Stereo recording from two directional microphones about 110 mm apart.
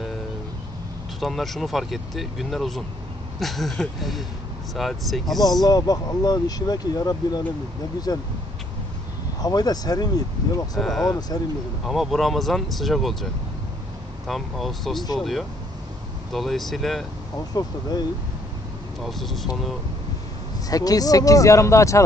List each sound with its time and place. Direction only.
1.2 s speech: centre (ahead or behind)
5.6 s speech: 35° left (ahead or behind)
9.4 s speech: 35° left (ahead or behind)
10.8 s speech: 5° left (ahead or behind)
11.1 s speech: 35° left (ahead or behind)
11.8 s speech: centre (ahead or behind)
17.6 s speech: 40° left (ahead or behind)
18.9 s speech: centre (ahead or behind)
20.7 s speech: 35° left (ahead or behind)